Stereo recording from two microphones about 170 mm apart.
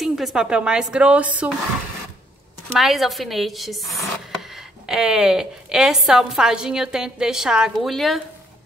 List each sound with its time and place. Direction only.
0.0 s speech: centre (ahead or behind)
2.7 s speech: centre (ahead or behind)